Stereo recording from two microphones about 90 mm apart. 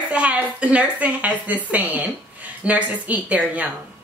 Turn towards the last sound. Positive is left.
turn(degrees=-15)  # may be behind; listen again after turning